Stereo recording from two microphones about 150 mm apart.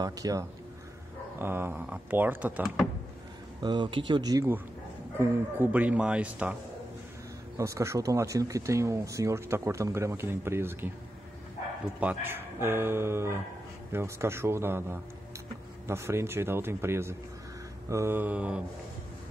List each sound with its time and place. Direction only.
0.0 s speech: 25° right (ahead or behind)
3.6 s speech: 30° right (ahead or behind)
5.2 s speech: 15° right (ahead or behind)
7.5 s speech: 20° right (ahead or behind)
12.0 s speech: 10° right (ahead or behind)